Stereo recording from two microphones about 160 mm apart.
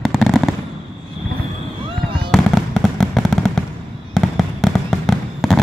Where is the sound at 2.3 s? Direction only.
Centre (ahead or behind).